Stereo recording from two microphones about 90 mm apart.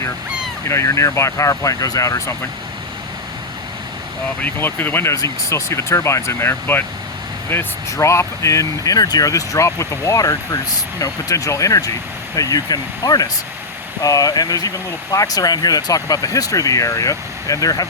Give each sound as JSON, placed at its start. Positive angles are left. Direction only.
{"t": 0.7, "sound": "speech", "side_deg": 35}
{"t": 4.4, "sound": "speech", "side_deg": 20}
{"t": 5.1, "sound": "speech", "side_deg": 35}